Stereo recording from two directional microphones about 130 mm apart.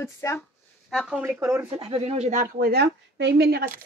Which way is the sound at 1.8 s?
50° right (ahead or behind).